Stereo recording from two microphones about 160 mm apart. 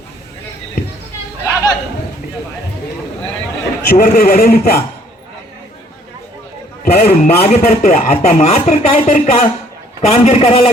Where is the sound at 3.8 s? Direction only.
65° left (ahead or behind).